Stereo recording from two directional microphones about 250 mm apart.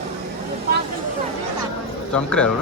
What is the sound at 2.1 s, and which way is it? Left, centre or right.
Speech, centre.